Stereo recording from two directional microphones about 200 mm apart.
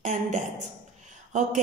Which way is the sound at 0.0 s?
35° right (ahead or behind).